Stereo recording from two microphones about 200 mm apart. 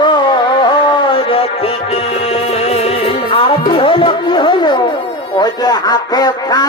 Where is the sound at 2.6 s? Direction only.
30° left (ahead or behind).